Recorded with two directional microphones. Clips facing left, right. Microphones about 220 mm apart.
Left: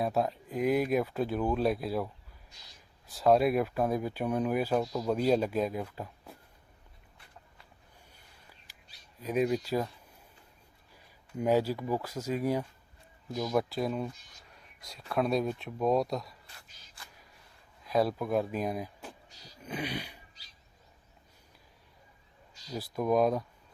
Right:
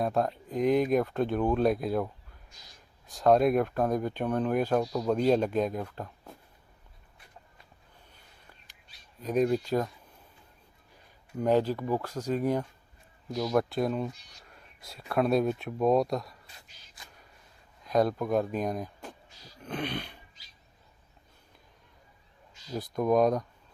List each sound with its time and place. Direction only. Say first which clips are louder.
0.0 s speech: right 2 dB; 5° left (ahead or behind)
3.1 s speech: right 2 dB; 5° left (ahead or behind)
9.2 s speech: right 3 dB; 5° left (ahead or behind)
11.3 s speech: right 2 dB; 10° left (ahead or behind)
17.8 s speech: right 2 dB; 5° left (ahead or behind)
22.7 s speech: right 3 dB; 5° left (ahead or behind)